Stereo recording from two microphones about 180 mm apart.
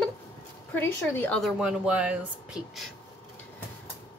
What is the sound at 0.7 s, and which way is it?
Speech, 10° left (ahead or behind).